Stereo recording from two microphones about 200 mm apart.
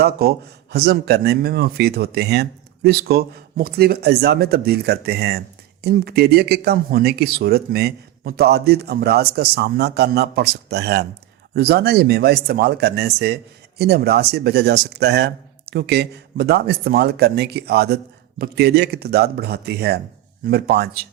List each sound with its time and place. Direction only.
0.0 s speech: 50° right (ahead or behind)